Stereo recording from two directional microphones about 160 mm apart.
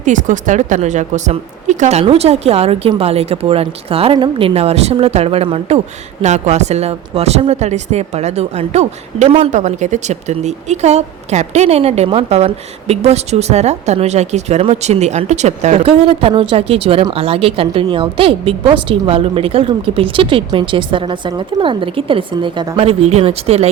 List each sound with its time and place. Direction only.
0.0 s speech: 50° right (ahead or behind)